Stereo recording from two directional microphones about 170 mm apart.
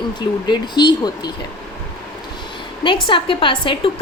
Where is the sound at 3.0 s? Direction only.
30° left (ahead or behind).